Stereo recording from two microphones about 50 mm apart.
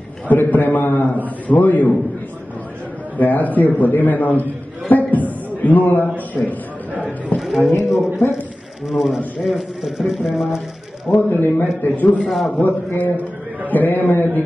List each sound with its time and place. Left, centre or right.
0.3 s a man's voice: left
3.2 s a man's voice: left
7.3 s a sound: centre
8.2 s a man's voice: left
8.9 s speech: centre
11.1 s a man's voice: left
12.2 s speech: centre
12.5 s a man's voice: left